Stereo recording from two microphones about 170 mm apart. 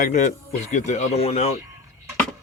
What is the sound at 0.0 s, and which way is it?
Speech, 45° left (ahead or behind).